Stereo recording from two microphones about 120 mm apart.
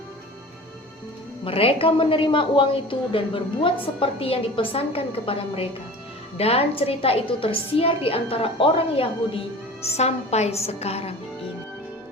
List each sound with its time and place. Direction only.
1.5 s a woman's voice: 50° left (ahead or behind)
10.0 s a woman's voice: 65° left (ahead or behind)